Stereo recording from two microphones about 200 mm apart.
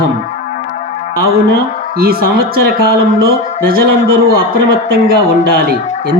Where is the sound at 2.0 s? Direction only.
50° right (ahead or behind).